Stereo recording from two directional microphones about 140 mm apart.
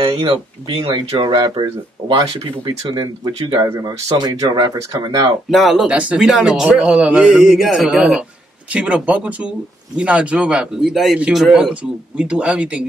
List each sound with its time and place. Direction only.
0.0 s speech: 40° right (ahead or behind)
3.6 s speech: 25° right (ahead or behind)
5.5 s a man's voice: centre (ahead or behind)